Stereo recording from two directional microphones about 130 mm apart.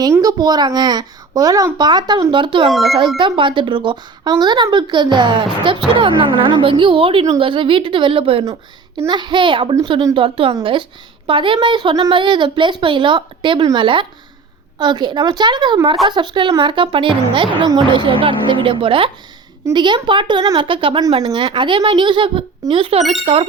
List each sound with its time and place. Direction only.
0.0 s speech: 30° right (ahead or behind)
2.6 s speech: centre (ahead or behind)
3.2 s speech: 40° right (ahead or behind)